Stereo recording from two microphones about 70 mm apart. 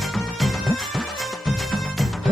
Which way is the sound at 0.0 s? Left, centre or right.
Centre.